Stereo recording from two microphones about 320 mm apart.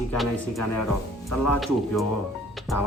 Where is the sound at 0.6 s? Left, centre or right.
Left.